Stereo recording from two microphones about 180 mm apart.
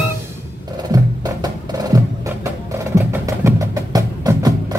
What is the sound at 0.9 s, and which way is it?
Music, 20° right (ahead or behind).